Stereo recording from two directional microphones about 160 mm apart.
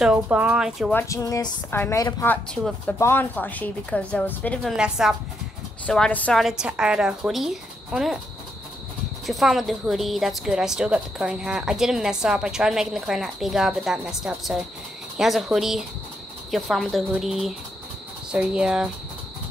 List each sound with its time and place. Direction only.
0.0 s a woman's voice: 5° right (ahead or behind)
0.9 s a woman's voice: 20° left (ahead or behind)
4.7 s a woman's voice: 5° right (ahead or behind)
5.9 s a woman's voice: 5° left (ahead or behind)
9.2 s a woman's voice: centre (ahead or behind)